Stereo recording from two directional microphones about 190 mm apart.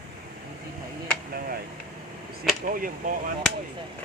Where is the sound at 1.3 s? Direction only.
50° right (ahead or behind).